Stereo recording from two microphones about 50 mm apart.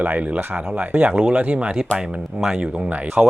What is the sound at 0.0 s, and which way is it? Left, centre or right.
Speech, right.